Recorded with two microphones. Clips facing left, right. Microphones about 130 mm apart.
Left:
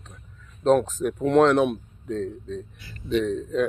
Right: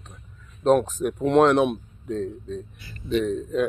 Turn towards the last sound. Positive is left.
turn(degrees=-10)  # may be behind; listen again after turning